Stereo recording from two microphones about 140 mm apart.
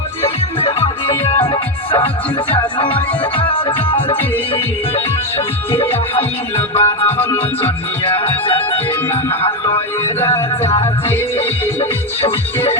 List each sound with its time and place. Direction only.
0.6 s music: 45° left (ahead or behind)
2.6 s music: 35° left (ahead or behind)
6.7 s music: 45° left (ahead or behind)
7.2 s music: 15° left (ahead or behind)
8.0 s music: 45° left (ahead or behind)
10.2 s music: 15° left (ahead or behind)